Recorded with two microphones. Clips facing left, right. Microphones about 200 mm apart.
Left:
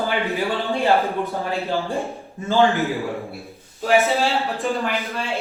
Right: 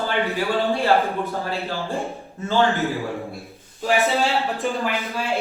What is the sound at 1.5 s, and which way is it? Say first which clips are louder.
A man's voice: left 3 dB; 15° left (ahead or behind).